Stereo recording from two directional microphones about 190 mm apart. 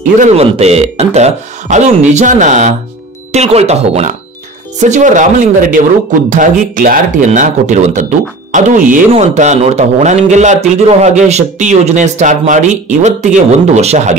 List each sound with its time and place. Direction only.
0.2 s speech: 35° right (ahead or behind)